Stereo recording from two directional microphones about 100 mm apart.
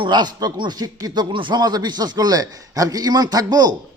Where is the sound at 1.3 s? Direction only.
50° right (ahead or behind).